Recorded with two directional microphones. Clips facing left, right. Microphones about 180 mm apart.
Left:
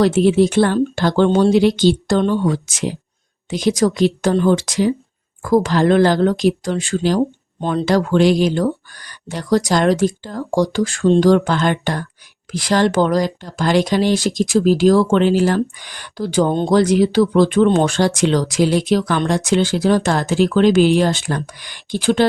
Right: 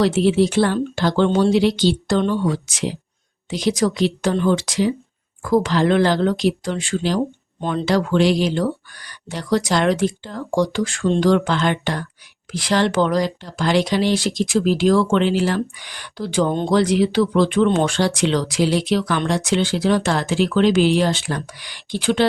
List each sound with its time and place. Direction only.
0.0 s speech: 50° left (ahead or behind)